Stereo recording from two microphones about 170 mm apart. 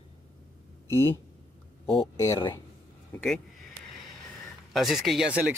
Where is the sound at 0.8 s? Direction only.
15° left (ahead or behind).